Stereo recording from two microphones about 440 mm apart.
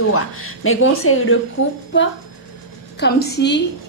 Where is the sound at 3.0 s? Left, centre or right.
Left.